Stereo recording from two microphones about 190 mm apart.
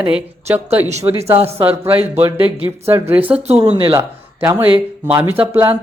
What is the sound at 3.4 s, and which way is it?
Speech, 35° right (ahead or behind).